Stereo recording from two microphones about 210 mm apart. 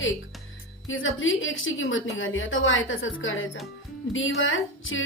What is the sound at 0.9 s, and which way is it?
A woman's voice, 70° left (ahead or behind).